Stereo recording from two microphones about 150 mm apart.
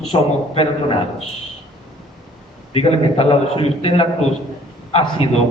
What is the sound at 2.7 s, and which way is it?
A man's voice, 40° left (ahead or behind).